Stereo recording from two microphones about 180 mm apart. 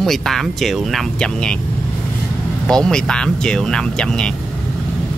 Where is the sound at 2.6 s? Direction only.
5° left (ahead or behind).